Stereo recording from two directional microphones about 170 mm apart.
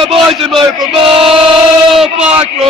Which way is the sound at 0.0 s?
30° right (ahead or behind).